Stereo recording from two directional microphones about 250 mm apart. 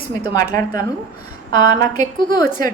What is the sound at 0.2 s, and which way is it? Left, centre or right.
Speech, centre.